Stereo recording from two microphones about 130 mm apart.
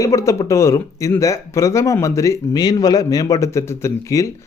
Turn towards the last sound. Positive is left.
turn(degrees=25)  # may be behind; listen again after turning